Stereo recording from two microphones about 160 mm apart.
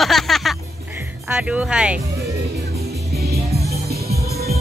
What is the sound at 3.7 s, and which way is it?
Music, 80° right.